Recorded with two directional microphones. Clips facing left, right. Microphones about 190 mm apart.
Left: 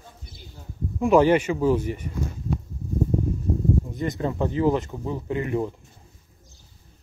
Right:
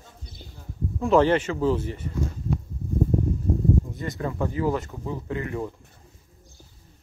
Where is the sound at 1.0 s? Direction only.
10° left (ahead or behind).